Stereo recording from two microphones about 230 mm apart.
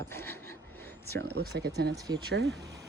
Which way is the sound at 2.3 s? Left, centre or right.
Right.